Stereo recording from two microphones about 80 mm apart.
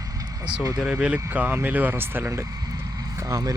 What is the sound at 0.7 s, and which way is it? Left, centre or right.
Speech, centre.